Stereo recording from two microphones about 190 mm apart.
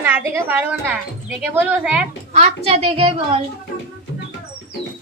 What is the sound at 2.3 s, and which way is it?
A child's voice, 35° right (ahead or behind).